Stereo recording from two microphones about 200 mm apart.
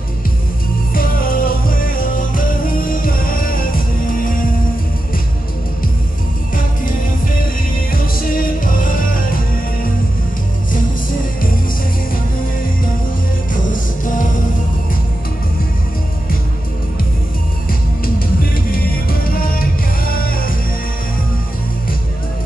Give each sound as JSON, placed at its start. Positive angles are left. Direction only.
{"t": 0.9, "sound": "music", "side_deg": 45}
{"t": 7.9, "sound": "music", "side_deg": 45}
{"t": 13.5, "sound": "music", "side_deg": 40}
{"t": 17.6, "sound": "music", "side_deg": 45}